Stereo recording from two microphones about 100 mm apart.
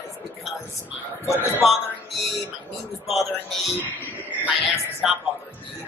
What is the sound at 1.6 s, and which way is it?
Speech, centre (ahead or behind).